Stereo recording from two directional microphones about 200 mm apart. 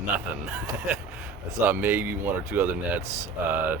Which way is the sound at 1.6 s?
10° right (ahead or behind).